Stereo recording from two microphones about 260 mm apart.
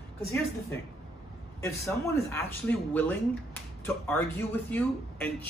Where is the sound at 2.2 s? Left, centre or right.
Centre.